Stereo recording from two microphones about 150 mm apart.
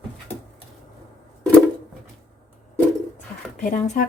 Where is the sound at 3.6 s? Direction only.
55° left (ahead or behind).